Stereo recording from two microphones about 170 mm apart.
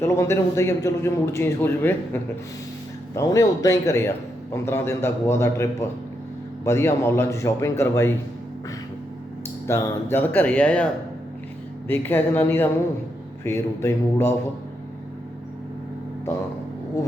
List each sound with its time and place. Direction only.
0.0 s a man's voice: 15° left (ahead or behind)
6.7 s a man's voice: 15° left (ahead or behind)
9.6 s a man's voice: 15° left (ahead or behind)
11.9 s a man's voice: 10° left (ahead or behind)